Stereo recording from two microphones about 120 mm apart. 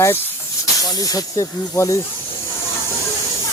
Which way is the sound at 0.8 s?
30° left (ahead or behind).